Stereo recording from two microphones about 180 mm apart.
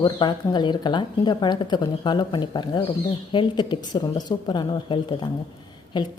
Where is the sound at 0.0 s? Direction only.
25° left (ahead or behind).